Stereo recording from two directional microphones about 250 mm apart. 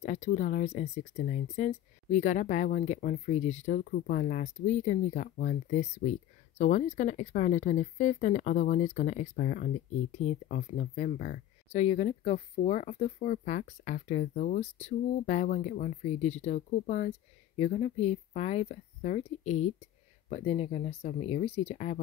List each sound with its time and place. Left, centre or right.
0.0 s speech: left